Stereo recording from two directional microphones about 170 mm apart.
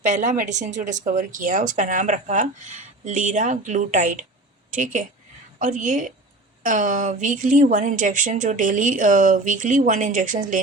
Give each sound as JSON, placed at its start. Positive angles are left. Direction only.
{"t": 0.0, "sound": "speech", "side_deg": -45}